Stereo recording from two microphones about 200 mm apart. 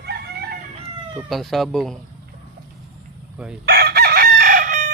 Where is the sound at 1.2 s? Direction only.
Centre (ahead or behind).